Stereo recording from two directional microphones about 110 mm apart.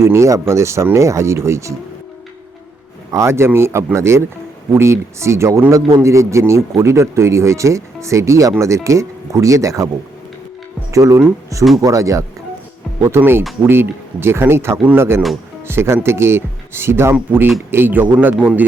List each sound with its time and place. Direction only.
0.0 s speech: 25° right (ahead or behind)
3.1 s speech: 25° right (ahead or behind)
10.9 s speech: 30° right (ahead or behind)